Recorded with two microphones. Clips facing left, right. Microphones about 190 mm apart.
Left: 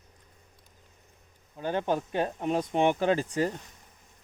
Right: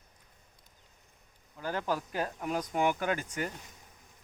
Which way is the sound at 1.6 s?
20° left (ahead or behind).